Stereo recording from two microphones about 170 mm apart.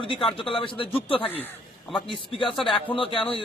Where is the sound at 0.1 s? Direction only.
30° left (ahead or behind).